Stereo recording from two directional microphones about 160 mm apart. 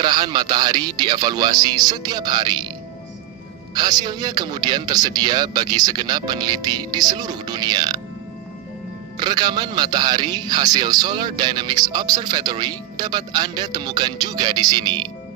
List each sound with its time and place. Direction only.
0.0 s a man's voice: 25° right (ahead or behind)
3.7 s a man's voice: 25° right (ahead or behind)
9.2 s a man's voice: 25° right (ahead or behind)